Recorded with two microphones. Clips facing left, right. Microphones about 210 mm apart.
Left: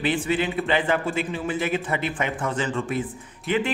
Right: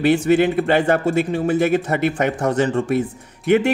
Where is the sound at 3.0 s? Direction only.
65° right (ahead or behind).